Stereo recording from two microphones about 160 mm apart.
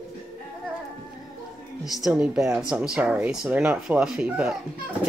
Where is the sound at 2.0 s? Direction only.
5° right (ahead or behind).